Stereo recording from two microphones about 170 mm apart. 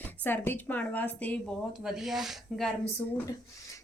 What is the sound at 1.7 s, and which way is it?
Speech, centre (ahead or behind).